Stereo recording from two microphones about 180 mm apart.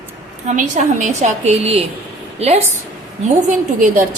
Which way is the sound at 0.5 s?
45° right (ahead or behind).